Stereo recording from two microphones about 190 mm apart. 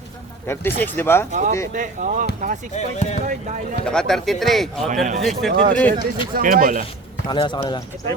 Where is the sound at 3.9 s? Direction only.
5° left (ahead or behind).